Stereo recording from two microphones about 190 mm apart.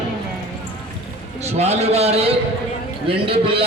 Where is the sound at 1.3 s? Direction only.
35° right (ahead or behind).